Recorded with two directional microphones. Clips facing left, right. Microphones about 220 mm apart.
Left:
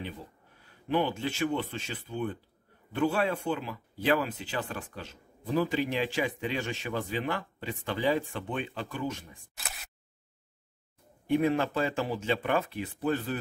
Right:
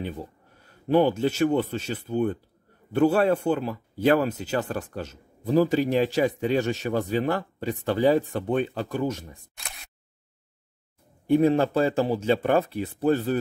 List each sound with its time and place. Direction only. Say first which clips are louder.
0.8 s speech: right 8 dB; 40° right (ahead or behind)
9.6 s single-lens reflex camera: left 5 dB; centre (ahead or behind)
11.2 s speech: right 6 dB; 35° right (ahead or behind)